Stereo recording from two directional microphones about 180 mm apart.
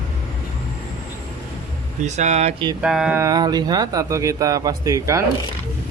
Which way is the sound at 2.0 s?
40° right (ahead or behind).